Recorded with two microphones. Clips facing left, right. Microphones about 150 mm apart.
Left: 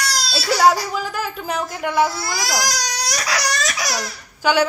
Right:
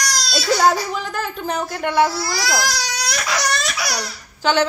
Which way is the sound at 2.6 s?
40° left (ahead or behind).